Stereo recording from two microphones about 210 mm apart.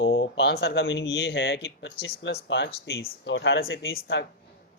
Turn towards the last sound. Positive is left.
turn(degrees=55)  # may be behind; listen again after turning